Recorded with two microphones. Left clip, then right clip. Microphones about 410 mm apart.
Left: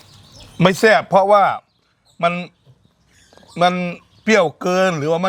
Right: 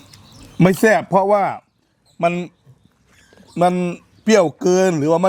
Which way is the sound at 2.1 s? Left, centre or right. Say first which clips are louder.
Even; centre.